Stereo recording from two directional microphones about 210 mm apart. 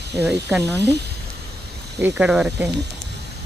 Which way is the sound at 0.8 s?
55° right (ahead or behind).